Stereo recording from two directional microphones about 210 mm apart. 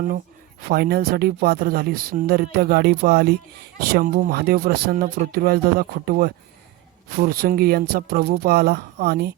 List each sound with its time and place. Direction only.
0.7 s a woman's voice: 45° right (ahead or behind)